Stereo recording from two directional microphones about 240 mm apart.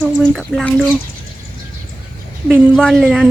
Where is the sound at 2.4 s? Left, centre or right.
Centre.